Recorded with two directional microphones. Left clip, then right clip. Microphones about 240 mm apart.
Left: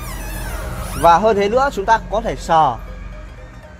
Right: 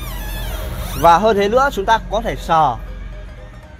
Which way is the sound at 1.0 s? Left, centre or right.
Centre.